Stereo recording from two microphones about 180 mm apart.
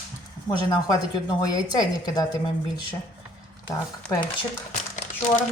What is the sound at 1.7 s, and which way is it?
Speech, 20° left (ahead or behind).